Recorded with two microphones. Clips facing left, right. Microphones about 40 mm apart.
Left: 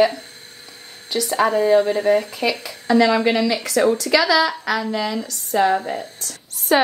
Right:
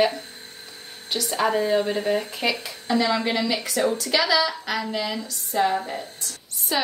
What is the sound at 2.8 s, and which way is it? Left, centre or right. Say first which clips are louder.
Speech: left 7 dB; left.